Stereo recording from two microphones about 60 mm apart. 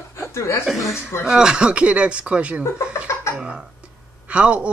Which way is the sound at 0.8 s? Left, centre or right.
Left.